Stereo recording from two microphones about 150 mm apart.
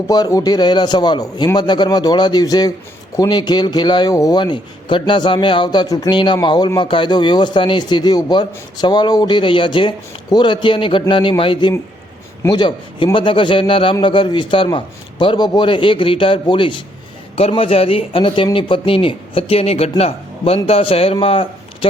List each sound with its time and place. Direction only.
0.1 s a man's voice: 25° left (ahead or behind)